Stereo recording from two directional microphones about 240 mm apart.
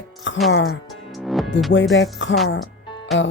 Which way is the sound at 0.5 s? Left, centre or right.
Left.